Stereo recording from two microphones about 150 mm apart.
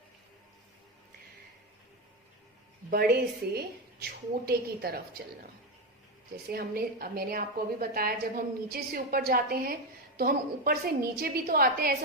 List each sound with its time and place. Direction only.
2.9 s a woman's voice: 90° right
6.3 s a woman's voice: 90° right